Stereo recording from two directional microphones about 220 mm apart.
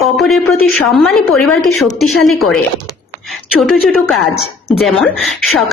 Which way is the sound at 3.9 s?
Centre (ahead or behind).